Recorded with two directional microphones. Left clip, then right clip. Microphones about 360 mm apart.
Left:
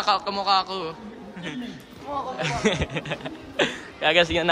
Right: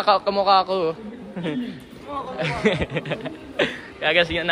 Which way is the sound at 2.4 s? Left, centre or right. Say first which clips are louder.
Right 3 dB; centre.